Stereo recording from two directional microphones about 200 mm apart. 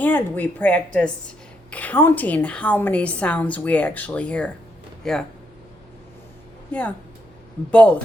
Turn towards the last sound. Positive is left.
turn(degrees=5)  # may be behind; listen again after turning